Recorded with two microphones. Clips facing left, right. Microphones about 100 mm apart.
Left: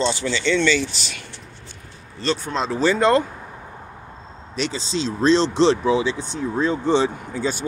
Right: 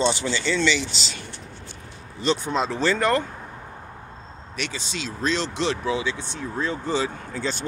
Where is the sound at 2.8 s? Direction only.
15° left (ahead or behind).